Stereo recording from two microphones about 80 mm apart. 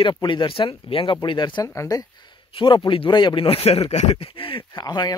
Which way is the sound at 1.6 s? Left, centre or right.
Left.